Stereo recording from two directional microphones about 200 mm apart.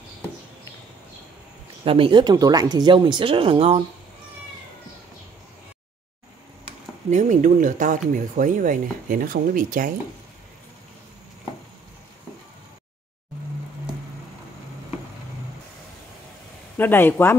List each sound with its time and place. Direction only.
1.9 s speech: 25° right (ahead or behind)
7.1 s speech: 35° right (ahead or behind)
16.7 s speech: 10° left (ahead or behind)